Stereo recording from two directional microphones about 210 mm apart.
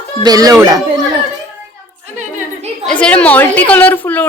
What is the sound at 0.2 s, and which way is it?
Speech, 20° right (ahead or behind).